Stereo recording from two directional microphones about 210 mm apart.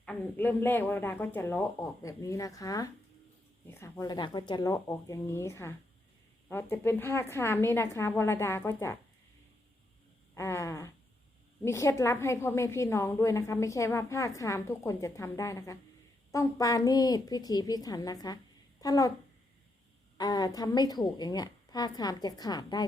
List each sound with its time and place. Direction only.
0.0 s a woman's voice: 5° left (ahead or behind)
10.3 s a woman's voice: 15° left (ahead or behind)
20.1 s a woman's voice: 20° left (ahead or behind)